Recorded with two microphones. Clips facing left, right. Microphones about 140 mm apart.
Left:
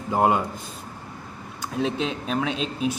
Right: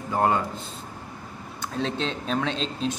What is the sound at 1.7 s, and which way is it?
Speech, 10° left (ahead or behind).